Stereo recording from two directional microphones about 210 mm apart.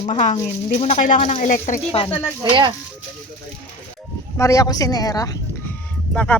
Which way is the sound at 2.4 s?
20° right (ahead or behind).